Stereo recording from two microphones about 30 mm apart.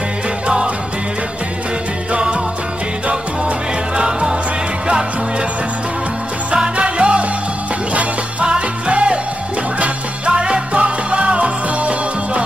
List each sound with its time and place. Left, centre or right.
3.1 s music: right
4.0 s music: right
6.5 s music: right
7.9 s music: right
8.5 s music: right